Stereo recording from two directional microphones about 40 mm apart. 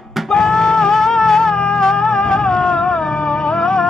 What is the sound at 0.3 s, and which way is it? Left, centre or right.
Music, centre.